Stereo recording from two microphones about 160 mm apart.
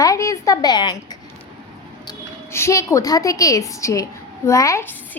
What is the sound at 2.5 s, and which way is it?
A woman's voice, 15° left (ahead or behind).